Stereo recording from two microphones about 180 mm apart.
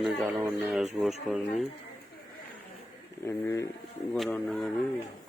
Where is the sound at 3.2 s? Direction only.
15° left (ahead or behind).